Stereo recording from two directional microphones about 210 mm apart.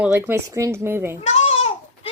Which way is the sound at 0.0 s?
10° right (ahead or behind).